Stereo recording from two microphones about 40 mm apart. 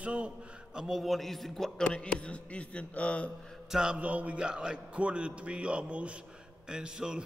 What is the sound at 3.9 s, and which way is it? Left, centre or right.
Speech, right.